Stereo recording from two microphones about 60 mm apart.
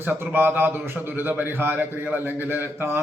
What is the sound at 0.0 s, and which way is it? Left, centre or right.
A man's voice, right.